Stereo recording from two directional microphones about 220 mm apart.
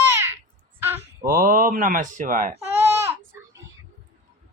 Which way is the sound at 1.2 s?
40° right (ahead or behind).